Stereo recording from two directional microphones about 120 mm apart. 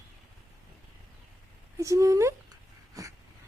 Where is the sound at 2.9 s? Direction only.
30° right (ahead or behind).